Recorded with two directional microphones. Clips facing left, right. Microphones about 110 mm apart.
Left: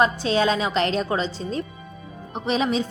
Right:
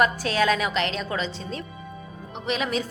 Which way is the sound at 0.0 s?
25° left (ahead or behind).